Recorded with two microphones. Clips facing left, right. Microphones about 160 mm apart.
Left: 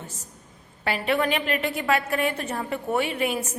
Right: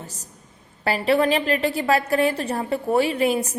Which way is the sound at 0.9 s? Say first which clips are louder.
Right 5 dB; 35° right (ahead or behind).